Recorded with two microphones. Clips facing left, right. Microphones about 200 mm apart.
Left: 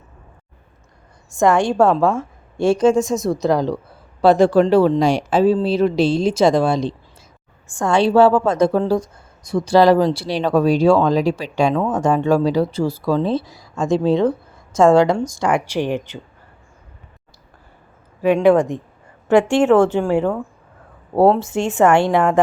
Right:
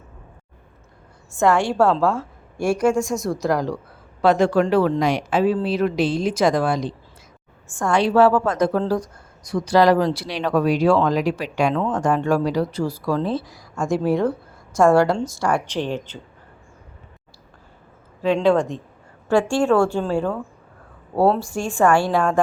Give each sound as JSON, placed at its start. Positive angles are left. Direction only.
{"t": 1.4, "sound": "speech", "side_deg": 15}
{"t": 7.9, "sound": "speech", "side_deg": 25}
{"t": 11.7, "sound": "speech", "side_deg": 10}
{"t": 11.9, "sound": "speech", "side_deg": 20}
{"t": 18.2, "sound": "speech", "side_deg": 15}